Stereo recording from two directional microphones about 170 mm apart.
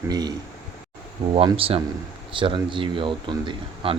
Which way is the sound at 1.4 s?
35° right (ahead or behind).